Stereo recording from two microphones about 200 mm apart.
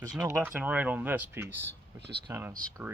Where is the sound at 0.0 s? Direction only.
15° right (ahead or behind).